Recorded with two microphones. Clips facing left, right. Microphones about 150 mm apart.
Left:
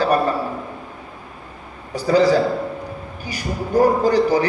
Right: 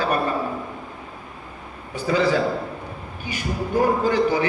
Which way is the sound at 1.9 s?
40° left (ahead or behind).